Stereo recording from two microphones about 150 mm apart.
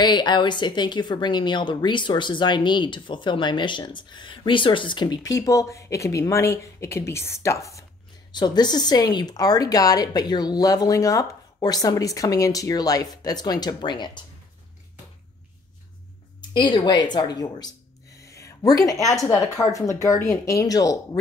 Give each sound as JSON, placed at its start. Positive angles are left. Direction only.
{"t": 0.0, "sound": "a woman's voice", "side_deg": 30}
{"t": 16.3, "sound": "speech", "side_deg": 30}
{"t": 18.1, "sound": "a sound", "side_deg": 20}
{"t": 19.2, "sound": "speech", "side_deg": 20}